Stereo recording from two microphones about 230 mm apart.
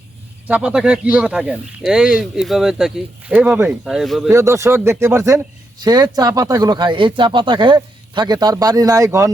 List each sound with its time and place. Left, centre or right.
0.4 s speech: centre
4.3 s speech: centre